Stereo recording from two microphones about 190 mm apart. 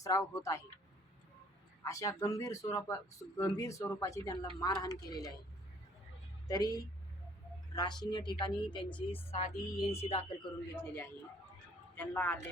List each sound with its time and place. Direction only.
0.0 s speech: 15° left (ahead or behind)
1.8 s speech: 15° left (ahead or behind)
6.5 s speech: 20° left (ahead or behind)
9.6 s speech: 20° left (ahead or behind)
10.0 s speech: 30° left (ahead or behind)
10.8 s speech: 10° left (ahead or behind)